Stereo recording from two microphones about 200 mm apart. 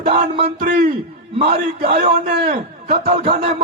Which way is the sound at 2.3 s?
45° right (ahead or behind).